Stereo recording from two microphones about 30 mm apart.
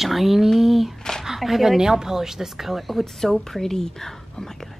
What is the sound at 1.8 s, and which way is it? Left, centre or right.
Speech, centre.